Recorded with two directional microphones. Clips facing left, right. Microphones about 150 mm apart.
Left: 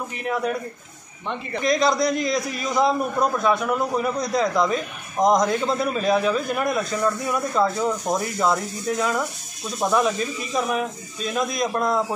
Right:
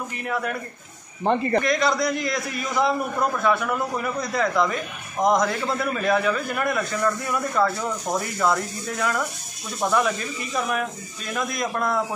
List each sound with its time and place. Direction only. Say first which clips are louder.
0.3 s a man's voice: left 3 dB; 20° left (ahead or behind)
1.2 s speech: right 9 dB; 45° right (ahead or behind)
1.6 s a man's voice: left 2 dB; 20° left (ahead or behind)